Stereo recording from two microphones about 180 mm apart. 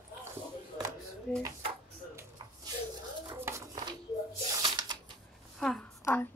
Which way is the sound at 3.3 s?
15° right (ahead or behind).